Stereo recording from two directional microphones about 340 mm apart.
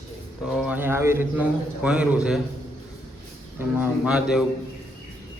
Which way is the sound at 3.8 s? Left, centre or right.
Centre.